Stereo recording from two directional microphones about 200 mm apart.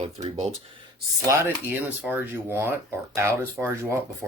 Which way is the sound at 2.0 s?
10° right (ahead or behind).